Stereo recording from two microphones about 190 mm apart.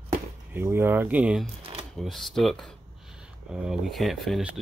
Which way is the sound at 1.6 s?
30° right (ahead or behind).